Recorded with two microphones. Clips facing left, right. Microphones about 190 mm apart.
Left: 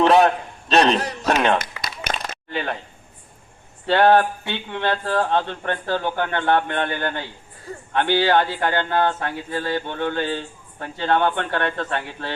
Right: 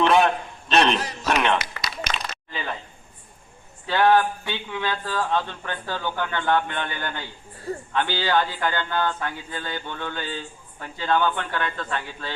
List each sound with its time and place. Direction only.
0.0 s a man's voice: 40° left (ahead or behind)
0.9 s a man's voice: 60° left (ahead or behind)
1.4 s a sound: 45° left (ahead or behind); by 2.7 s 65° left (ahead or behind)
3.8 s speech: 65° left (ahead or behind)